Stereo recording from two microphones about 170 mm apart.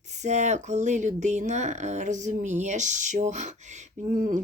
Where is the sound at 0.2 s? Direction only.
45° right (ahead or behind).